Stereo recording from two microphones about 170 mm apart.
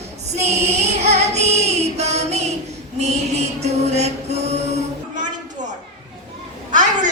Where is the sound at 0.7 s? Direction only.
40° right (ahead or behind).